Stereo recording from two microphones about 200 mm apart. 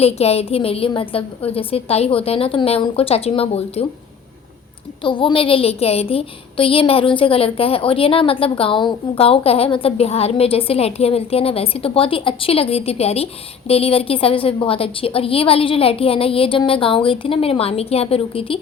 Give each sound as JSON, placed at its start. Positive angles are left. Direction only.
{"t": 0.0, "sound": "a woman's voice", "side_deg": 30}
{"t": 5.0, "sound": "a woman's voice", "side_deg": 25}